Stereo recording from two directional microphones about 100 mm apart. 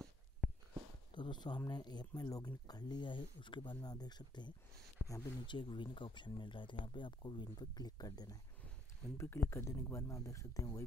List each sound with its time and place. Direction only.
1.1 s speech: 50° left (ahead or behind)
5.0 s a sound: 10° right (ahead or behind)
5.5 s speech: 50° left (ahead or behind)
9.2 s speech: 25° left (ahead or behind)